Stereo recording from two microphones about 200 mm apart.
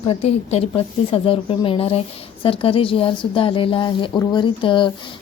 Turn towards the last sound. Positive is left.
turn(degrees=25)  # may be behind; listen again after turning